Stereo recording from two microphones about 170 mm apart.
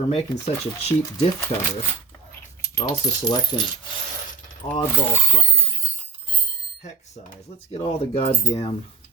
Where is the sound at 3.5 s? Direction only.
30° left (ahead or behind).